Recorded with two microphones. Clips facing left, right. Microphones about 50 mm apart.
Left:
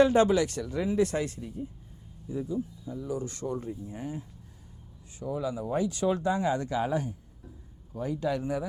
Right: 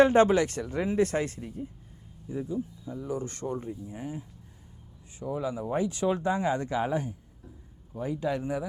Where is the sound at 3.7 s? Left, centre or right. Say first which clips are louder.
Even; centre.